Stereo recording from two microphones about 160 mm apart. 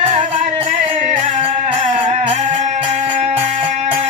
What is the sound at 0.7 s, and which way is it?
Music, 55° right (ahead or behind).